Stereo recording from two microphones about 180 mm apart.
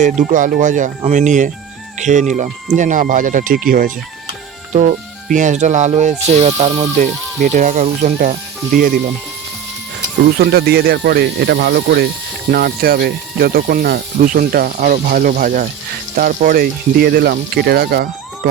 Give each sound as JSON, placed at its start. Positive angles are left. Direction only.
{"t": 0.0, "sound": "speech", "side_deg": -45}
{"t": 10.3, "sound": "speech", "side_deg": -60}